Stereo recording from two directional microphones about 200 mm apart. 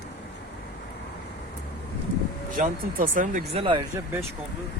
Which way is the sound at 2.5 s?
40° right (ahead or behind).